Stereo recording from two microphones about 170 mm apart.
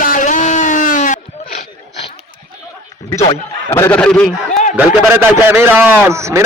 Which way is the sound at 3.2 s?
30° left (ahead or behind).